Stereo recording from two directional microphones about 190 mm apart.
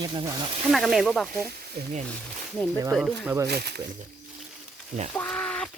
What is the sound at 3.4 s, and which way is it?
Speech, 55° right (ahead or behind).